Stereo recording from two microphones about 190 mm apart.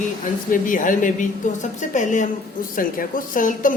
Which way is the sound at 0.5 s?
45° left (ahead or behind).